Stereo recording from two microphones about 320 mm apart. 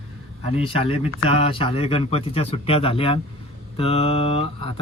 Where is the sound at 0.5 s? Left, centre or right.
Centre.